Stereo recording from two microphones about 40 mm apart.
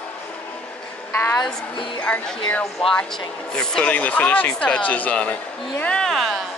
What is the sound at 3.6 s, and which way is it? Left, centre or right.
Speech, left.